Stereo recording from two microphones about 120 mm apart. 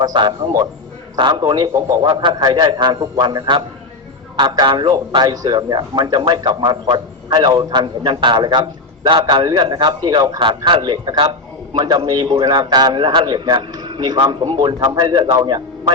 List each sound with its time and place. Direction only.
0.0 s a man's voice: 35° right (ahead or behind)